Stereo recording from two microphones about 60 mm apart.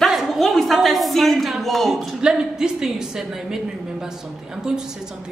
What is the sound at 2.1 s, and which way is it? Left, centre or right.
A woman's voice, centre.